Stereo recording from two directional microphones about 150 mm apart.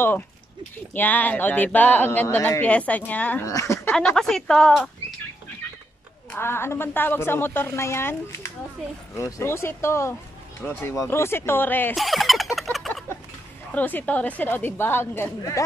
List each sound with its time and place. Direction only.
0.9 s speech: 10° left (ahead or behind)
3.4 s speech: 20° left (ahead or behind)
3.9 s speech: 5° left (ahead or behind)
6.3 s speech: 15° left (ahead or behind)
11.9 s speech: centre (ahead or behind)
12.7 s a sound: centre (ahead or behind)
13.7 s speech: 10° left (ahead or behind)